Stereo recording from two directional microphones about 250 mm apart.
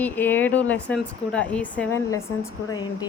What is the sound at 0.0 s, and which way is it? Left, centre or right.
Speech, centre.